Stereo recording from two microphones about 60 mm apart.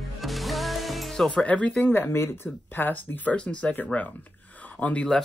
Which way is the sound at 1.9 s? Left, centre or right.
Left.